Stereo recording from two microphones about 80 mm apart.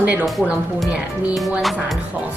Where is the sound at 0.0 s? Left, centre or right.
Centre.